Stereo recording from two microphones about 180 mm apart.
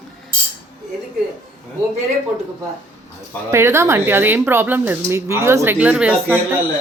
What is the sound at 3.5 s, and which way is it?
Speech, 15° right (ahead or behind).